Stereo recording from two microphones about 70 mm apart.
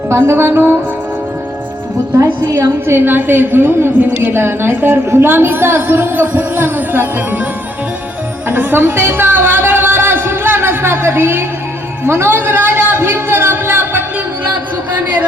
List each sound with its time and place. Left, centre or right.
0.1 s a woman's voice: right
2.1 s a woman's voice: right
2.8 s a woman's voice: right
8.4 s a sound: right